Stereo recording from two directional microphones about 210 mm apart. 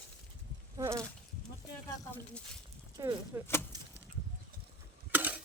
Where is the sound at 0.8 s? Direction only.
15° right (ahead or behind).